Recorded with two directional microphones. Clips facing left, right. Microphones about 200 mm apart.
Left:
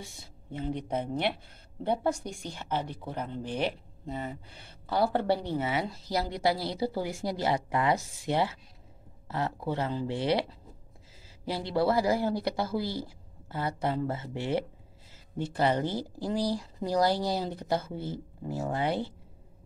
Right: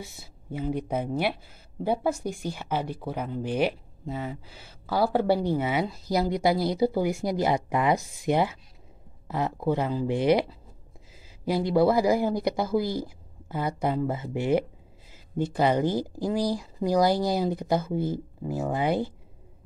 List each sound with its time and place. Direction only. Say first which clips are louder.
0.0 s speech: right 4 dB; 5° right (ahead or behind)
11.4 s speech: right 6 dB; 15° right (ahead or behind)